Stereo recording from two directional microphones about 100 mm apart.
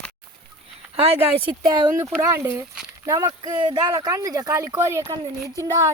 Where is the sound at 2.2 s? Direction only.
25° right (ahead or behind); by 3.9 s 50° right (ahead or behind).